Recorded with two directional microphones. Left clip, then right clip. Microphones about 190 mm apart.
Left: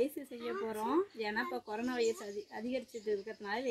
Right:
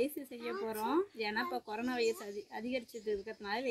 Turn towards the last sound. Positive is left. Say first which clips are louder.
# even
turn(degrees=0)  # may be behind; listen again after turning